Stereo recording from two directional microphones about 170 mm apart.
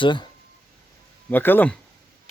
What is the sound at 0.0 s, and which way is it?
Speech, 25° left (ahead or behind).